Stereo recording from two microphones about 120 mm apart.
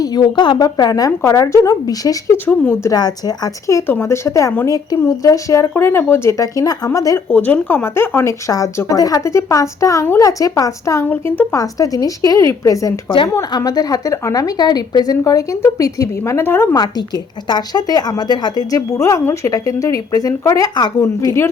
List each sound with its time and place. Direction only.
0.0 s a woman's voice: 35° left (ahead or behind)
2.5 s a woman's voice: 15° left (ahead or behind)
2.9 s a woman's voice: 35° left (ahead or behind)
7.3 s a woman's voice: 15° left (ahead or behind)
11.5 s speech: 30° left (ahead or behind)
17.5 s a woman's voice: 35° left (ahead or behind)